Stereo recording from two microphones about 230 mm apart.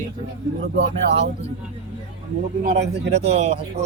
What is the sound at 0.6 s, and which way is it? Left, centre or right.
Speech, right.